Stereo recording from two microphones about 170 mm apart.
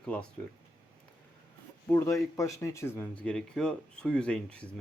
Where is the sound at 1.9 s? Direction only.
15° left (ahead or behind).